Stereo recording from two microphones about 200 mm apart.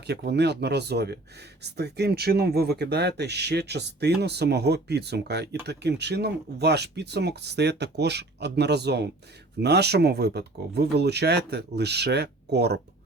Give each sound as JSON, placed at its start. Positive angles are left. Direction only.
{"t": 0.1, "sound": "speech", "side_deg": -55}